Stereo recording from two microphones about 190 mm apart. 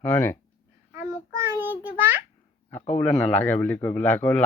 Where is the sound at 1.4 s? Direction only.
10° right (ahead or behind).